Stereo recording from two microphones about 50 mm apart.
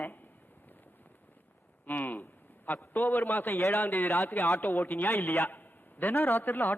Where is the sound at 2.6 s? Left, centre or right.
Left.